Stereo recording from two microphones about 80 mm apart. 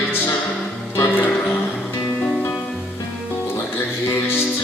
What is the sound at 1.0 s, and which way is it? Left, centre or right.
Music, left.